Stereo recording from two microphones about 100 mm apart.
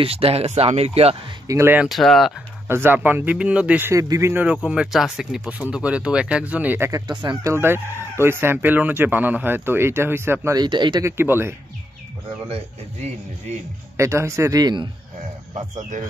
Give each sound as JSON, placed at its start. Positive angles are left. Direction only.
{"t": 0.0, "sound": "speech", "side_deg": -80}
{"t": 1.5, "sound": "speech", "side_deg": -25}
{"t": 1.9, "sound": "speech", "side_deg": 0}
{"t": 2.7, "sound": "speech", "side_deg": -20}
{"t": 3.9, "sound": "speech", "side_deg": -30}
{"t": 4.3, "sound": "speech", "side_deg": -15}
{"t": 4.6, "sound": "speech", "side_deg": -5}
{"t": 7.1, "sound": "speech", "side_deg": -50}
{"t": 7.4, "sound": "speech", "side_deg": -25}
{"t": 10.5, "sound": "speech", "side_deg": -45}
{"t": 11.0, "sound": "speech", "side_deg": -25}
{"t": 12.4, "sound": "speech", "side_deg": -90}
{"t": 13.9, "sound": "speech", "side_deg": -30}
{"t": 14.6, "sound": "speech", "side_deg": -45}